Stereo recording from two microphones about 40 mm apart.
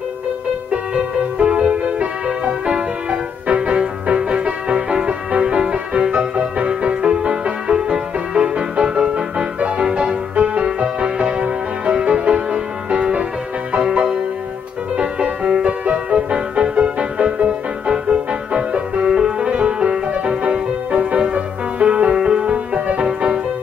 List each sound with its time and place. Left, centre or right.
0.7 s music: right
15.2 s music: right
19.5 s music: right